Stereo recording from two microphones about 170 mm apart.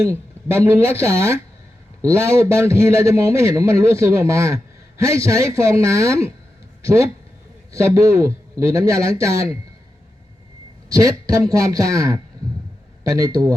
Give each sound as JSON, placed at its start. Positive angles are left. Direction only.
{"t": 0.0, "sound": "a man's voice", "side_deg": -15}
{"t": 10.8, "sound": "a man's voice", "side_deg": -20}